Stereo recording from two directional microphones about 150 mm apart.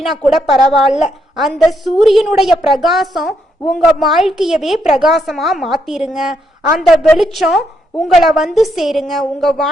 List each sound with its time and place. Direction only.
0.0 s a woman's voice: centre (ahead or behind)